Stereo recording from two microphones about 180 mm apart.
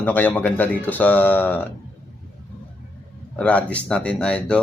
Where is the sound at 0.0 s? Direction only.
10° left (ahead or behind).